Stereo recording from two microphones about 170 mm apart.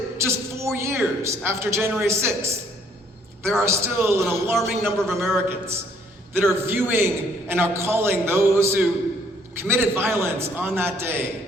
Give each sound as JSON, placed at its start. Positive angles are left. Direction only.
{"t": 0.2, "sound": "a man's voice", "side_deg": -15}
{"t": 3.6, "sound": "a man's voice", "side_deg": -15}
{"t": 4.5, "sound": "a man's voice", "side_deg": 0}
{"t": 4.9, "sound": "a man's voice", "side_deg": -15}